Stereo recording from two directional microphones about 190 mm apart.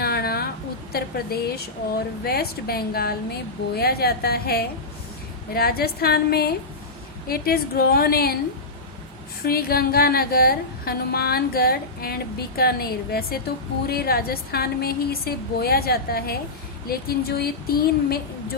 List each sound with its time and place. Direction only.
0.0 s a sound: 55° left (ahead or behind)
0.9 s a woman's voice: 55° left (ahead or behind)
9.4 s a woman's voice: 50° left (ahead or behind)